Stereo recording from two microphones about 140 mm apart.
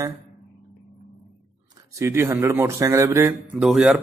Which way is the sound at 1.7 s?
25° right (ahead or behind).